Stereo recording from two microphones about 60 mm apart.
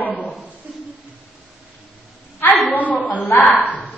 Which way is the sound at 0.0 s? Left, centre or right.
Left.